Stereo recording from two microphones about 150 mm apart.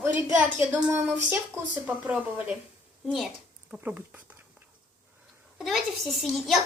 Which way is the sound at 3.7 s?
10° right (ahead or behind).